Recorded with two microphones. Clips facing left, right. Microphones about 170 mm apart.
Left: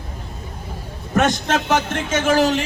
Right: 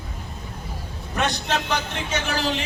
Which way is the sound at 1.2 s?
45° left (ahead or behind).